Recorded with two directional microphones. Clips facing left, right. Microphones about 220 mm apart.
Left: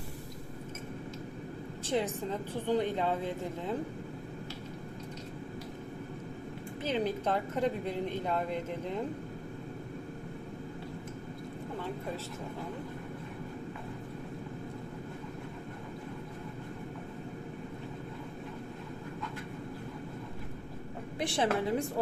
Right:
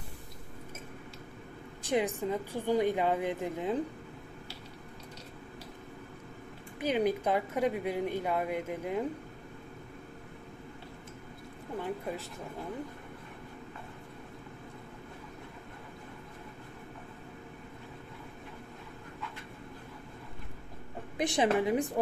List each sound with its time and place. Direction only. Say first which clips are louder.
1.8 s a woman's voice: right 2 dB; 15° right (ahead or behind)
6.8 s a woman's voice: right 3 dB; 15° right (ahead or behind)
21.2 s a woman's voice: right 3 dB; 15° right (ahead or behind)